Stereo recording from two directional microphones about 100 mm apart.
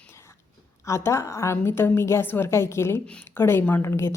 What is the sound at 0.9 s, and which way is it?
A woman's voice, 30° left (ahead or behind).